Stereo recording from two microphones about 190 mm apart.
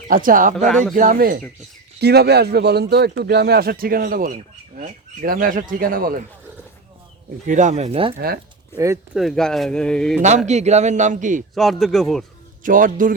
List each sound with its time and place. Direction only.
0.1 s speech: 45° right (ahead or behind)
2.0 s speech: 60° right (ahead or behind)
7.4 s a man's voice: 40° right (ahead or behind)
8.7 s speech: 15° right (ahead or behind)
9.1 s speech: centre (ahead or behind)
10.2 s a man's voice: 40° right (ahead or behind)
11.5 s speech: centre (ahead or behind)
12.6 s speech: 45° right (ahead or behind)